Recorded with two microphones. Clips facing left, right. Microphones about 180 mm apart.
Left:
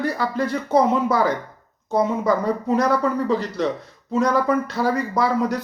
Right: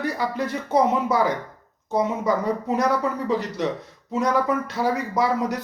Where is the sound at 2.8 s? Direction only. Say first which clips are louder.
Left 4 dB; 15° right (ahead or behind).